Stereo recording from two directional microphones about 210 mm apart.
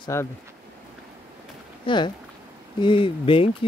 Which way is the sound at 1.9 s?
20° left (ahead or behind).